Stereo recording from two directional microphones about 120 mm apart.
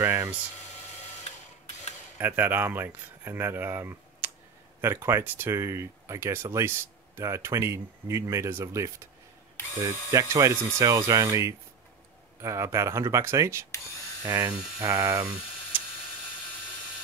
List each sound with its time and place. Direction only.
0.0 s speech: 20° right (ahead or behind)
2.1 s speech: 15° right (ahead or behind)